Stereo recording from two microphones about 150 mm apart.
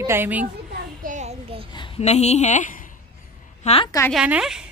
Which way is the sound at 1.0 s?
55° right (ahead or behind).